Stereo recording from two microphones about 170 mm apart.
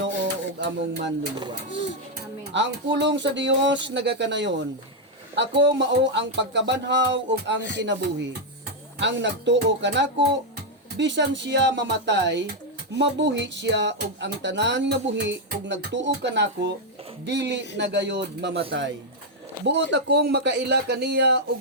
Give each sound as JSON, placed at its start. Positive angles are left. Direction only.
{"t": 0.6, "sound": "speech", "side_deg": -90}
{"t": 2.5, "sound": "speech", "side_deg": -90}
{"t": 19.6, "sound": "speech", "side_deg": -90}